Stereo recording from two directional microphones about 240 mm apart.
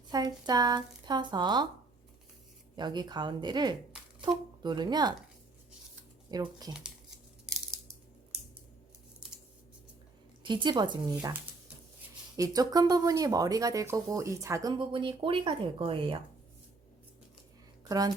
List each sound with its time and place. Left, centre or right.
0.1 s speech: centre
2.7 s speech: centre
6.3 s speech: centre
10.4 s speech: centre
17.8 s speech: centre